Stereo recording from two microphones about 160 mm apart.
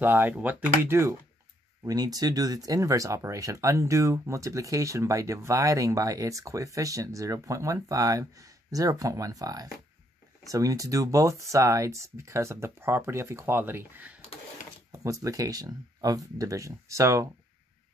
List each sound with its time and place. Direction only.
0.0 s speech: 10° right (ahead or behind)